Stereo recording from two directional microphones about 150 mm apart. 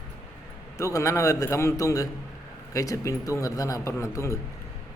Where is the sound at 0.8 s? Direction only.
20° left (ahead or behind).